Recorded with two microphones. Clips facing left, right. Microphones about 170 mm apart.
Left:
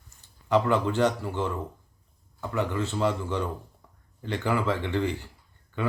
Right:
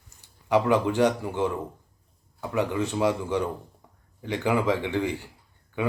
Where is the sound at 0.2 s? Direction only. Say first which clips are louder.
Right 1 dB; 10° right (ahead or behind).